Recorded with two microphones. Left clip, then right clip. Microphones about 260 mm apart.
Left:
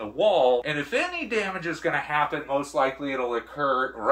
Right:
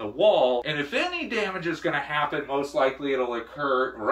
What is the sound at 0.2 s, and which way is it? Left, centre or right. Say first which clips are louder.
Speech: even; centre.